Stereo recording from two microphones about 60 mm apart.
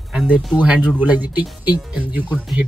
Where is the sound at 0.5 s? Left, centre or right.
Right.